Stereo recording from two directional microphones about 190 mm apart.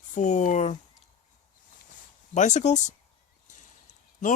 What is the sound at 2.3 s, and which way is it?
Speech, 40° left (ahead or behind).